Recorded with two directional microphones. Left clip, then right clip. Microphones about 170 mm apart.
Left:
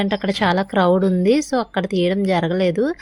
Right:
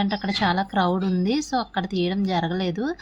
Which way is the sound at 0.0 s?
30° left (ahead or behind).